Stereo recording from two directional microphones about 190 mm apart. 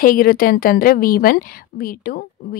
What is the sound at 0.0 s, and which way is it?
A woman's voice, 50° left (ahead or behind).